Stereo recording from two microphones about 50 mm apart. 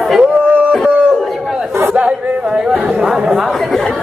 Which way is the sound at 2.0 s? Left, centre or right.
Centre.